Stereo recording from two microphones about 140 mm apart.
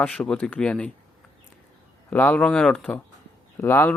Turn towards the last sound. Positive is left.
turn(degrees=15)  # may be behind; listen again after turning